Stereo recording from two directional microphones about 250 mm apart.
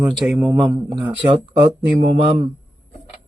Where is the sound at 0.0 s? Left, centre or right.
Centre.